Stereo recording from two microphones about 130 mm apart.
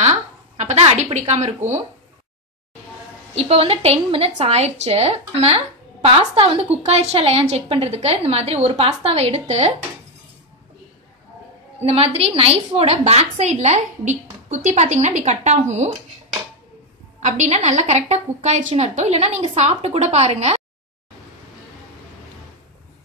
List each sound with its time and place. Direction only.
0.0 s a sound: 55° right (ahead or behind)
1.1 s a woman's voice: 60° right (ahead or behind)
3.3 s a woman's voice: 50° right (ahead or behind)
11.8 s a woman's voice: 50° right (ahead or behind)
17.2 s a woman's voice: 60° right (ahead or behind)